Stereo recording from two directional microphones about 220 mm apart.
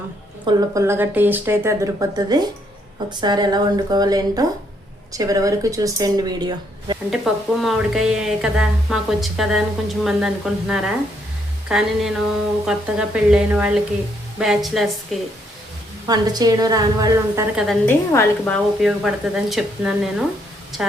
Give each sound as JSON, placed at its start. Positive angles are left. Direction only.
{"t": 0.4, "sound": "a woman's voice", "side_deg": -15}
{"t": 7.1, "sound": "a woman's voice", "side_deg": 0}
{"t": 16.0, "sound": "speech", "side_deg": -20}
{"t": 17.7, "sound": "a woman's voice", "side_deg": 10}